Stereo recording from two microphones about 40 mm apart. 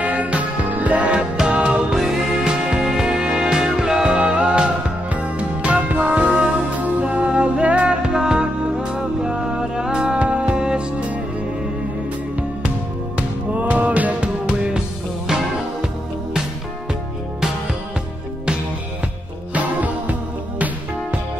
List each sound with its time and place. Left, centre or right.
0.0 s music: right
1.9 s music: centre
10.1 s music: right
10.6 s music: right
13.6 s music: right
14.2 s music: right
19.5 s music: right